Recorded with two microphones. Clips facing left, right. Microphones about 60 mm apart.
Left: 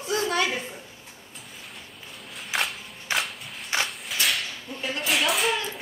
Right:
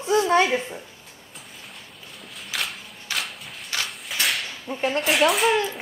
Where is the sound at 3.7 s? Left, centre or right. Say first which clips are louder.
Left 3 dB; left.